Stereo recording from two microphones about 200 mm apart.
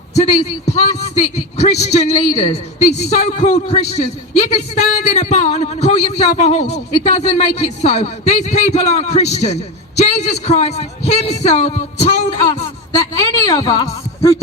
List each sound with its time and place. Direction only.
0.2 s a man's voice: 35° left (ahead or behind)
13.0 s a woman's voice: 15° left (ahead or behind)